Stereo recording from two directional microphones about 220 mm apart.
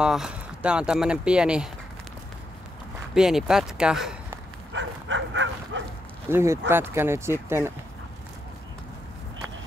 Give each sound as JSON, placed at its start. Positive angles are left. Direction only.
{"t": 0.0, "sound": "speech", "side_deg": -5}
{"t": 3.2, "sound": "speech", "side_deg": 0}
{"t": 4.7, "sound": "dog", "side_deg": -55}
{"t": 6.2, "sound": "speech", "side_deg": -10}